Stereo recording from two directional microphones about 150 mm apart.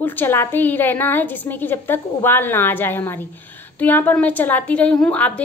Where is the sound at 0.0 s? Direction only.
15° left (ahead or behind).